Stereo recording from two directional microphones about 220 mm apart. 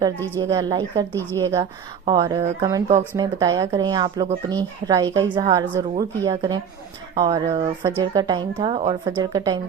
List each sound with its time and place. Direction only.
0.3 s speech: 15° right (ahead or behind)
1.1 s speech: 10° left (ahead or behind)
1.4 s speech: 15° right (ahead or behind)